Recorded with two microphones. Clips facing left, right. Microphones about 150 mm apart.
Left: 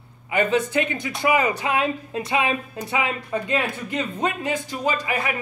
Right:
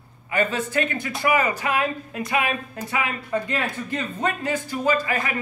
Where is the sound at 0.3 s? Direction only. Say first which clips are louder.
Left 3 dB; 15° left (ahead or behind).